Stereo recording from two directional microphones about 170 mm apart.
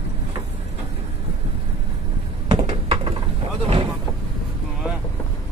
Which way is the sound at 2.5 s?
35° right (ahead or behind).